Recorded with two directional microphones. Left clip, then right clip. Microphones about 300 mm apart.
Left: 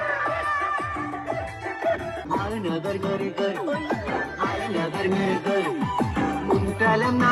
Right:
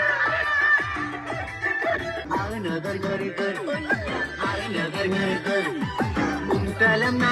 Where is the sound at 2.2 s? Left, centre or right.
Left.